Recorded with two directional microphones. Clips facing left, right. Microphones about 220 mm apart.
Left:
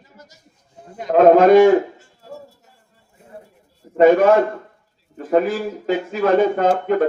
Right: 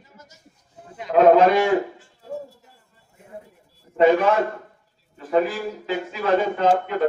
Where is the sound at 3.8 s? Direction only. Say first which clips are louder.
Left 7 dB; 50° left (ahead or behind).